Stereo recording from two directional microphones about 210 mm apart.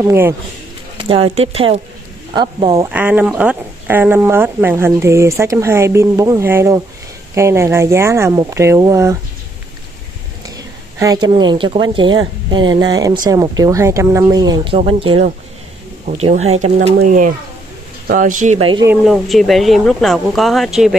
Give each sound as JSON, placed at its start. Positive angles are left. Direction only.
{"t": 0.0, "sound": "speech", "side_deg": -10}
{"t": 1.0, "sound": "a woman's voice", "side_deg": -25}
{"t": 11.0, "sound": "a woman's voice", "side_deg": -20}
{"t": 19.0, "sound": "speech", "side_deg": 0}